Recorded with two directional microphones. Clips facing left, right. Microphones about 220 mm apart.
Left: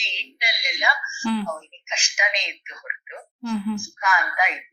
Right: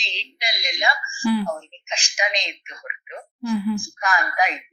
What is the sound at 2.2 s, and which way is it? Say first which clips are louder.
A woman's voice: right 3 dB; 35° right (ahead or behind).